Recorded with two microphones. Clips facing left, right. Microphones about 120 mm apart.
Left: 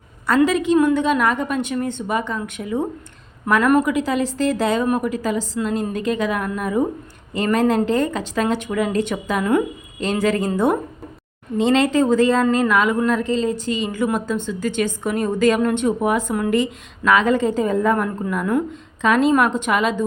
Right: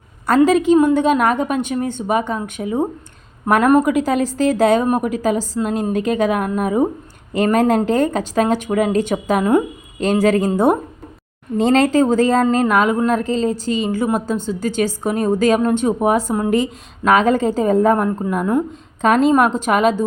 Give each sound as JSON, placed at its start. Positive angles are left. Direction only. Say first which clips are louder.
{"t": 0.3, "sound": "a woman's voice", "louder": "right 4 dB", "side_deg": -45}